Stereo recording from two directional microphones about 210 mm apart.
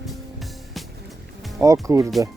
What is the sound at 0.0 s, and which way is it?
Music, centre (ahead or behind).